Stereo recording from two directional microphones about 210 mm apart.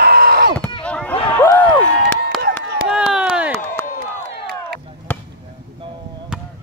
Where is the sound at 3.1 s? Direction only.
5° right (ahead or behind).